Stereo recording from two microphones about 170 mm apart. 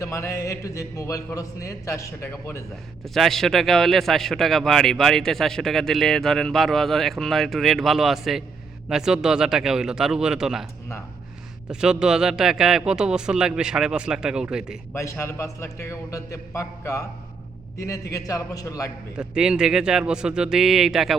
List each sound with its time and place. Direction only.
0.0 s speech: 15° left (ahead or behind)
3.0 s a man's voice: centre (ahead or behind)
11.7 s a man's voice: 5° right (ahead or behind)
14.9 s a man's voice: 15° left (ahead or behind)
19.1 s a man's voice: 5° right (ahead or behind)